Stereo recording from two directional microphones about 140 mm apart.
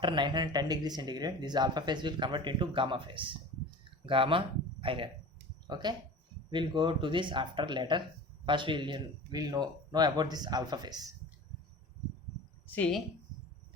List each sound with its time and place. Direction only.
0.0 s speech: 35° right (ahead or behind)